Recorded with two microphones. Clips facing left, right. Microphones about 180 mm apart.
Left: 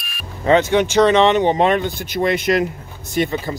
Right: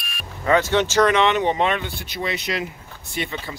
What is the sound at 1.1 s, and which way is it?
Speech, 30° left (ahead or behind).